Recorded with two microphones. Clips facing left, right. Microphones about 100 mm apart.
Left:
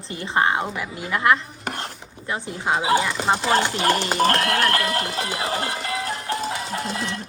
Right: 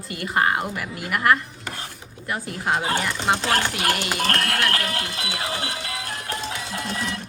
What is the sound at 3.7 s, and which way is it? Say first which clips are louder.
Speech: left 4 dB; 30° left (ahead or behind).